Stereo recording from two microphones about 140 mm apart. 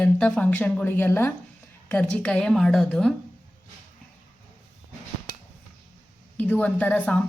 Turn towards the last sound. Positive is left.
turn(degrees=10)  # may be behind; listen again after turning